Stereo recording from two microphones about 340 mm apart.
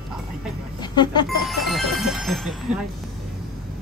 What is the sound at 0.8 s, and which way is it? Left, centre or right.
Speech, centre.